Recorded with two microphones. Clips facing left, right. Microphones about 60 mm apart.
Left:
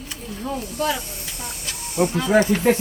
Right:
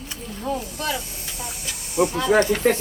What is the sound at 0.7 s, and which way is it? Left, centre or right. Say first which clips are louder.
Hiss: left 4 dB; centre.